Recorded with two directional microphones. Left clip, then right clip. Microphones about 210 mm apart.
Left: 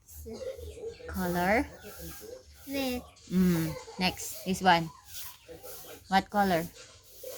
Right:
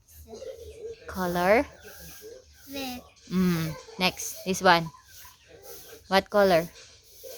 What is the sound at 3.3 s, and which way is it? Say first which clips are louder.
Speech: right 1 dB; 40° right (ahead or behind).